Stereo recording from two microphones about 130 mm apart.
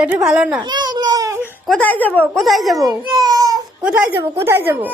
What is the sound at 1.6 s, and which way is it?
Speech, 10° left (ahead or behind).